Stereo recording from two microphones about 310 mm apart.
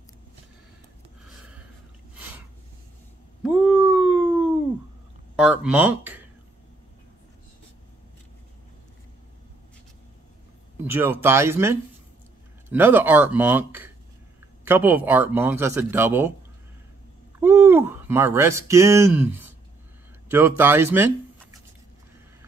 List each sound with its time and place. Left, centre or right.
3.4 s a sound: centre
5.3 s speech: centre
10.8 s speech: centre
17.4 s speech: centre